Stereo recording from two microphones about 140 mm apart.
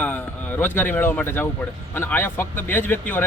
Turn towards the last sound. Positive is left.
turn(degrees=15)  # may be behind; listen again after turning